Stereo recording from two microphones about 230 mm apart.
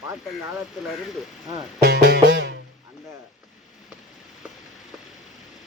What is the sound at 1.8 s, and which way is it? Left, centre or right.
Music, right.